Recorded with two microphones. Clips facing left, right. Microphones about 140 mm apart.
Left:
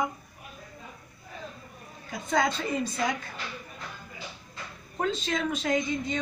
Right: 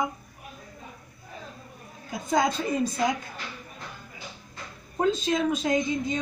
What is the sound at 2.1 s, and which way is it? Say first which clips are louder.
Speech: right 2 dB; 15° right (ahead or behind).